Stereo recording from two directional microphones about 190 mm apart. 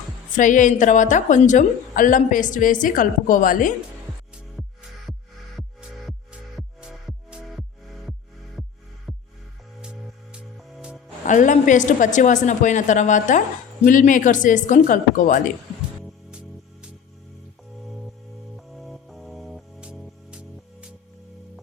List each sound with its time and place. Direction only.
0.3 s a woman's voice: 40° left (ahead or behind)
4.6 s music: centre (ahead or behind)
6.6 s music: centre (ahead or behind)
11.3 s a woman's voice: 40° left (ahead or behind)
17.8 s music: centre (ahead or behind)